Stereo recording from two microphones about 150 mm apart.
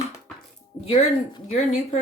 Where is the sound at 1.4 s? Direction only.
50° left (ahead or behind).